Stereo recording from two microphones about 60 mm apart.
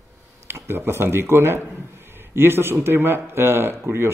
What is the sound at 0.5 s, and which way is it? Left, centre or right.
Speech, right.